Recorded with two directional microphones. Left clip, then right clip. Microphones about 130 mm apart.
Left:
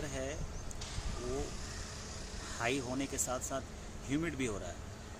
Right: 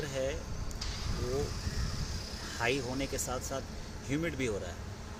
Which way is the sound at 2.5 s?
20° left (ahead or behind).